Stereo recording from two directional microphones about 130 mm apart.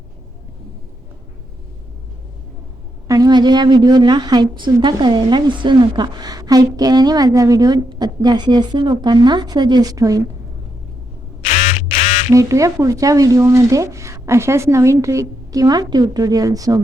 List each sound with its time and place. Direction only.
3.1 s a woman's voice: 30° right (ahead or behind)
11.4 s quack: 55° left (ahead or behind)
12.3 s speech: 25° right (ahead or behind)